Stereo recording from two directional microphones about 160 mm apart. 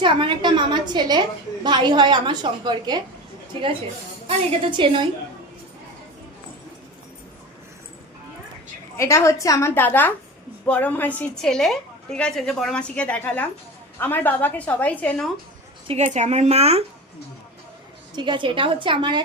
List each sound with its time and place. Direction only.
0.0 s a woman's voice: 30° right (ahead or behind)
4.3 s a woman's voice: 35° right (ahead or behind)
9.0 s a woman's voice: 20° left (ahead or behind)
15.9 s a woman's voice: 45° right (ahead or behind)
18.2 s a woman's voice: 30° right (ahead or behind)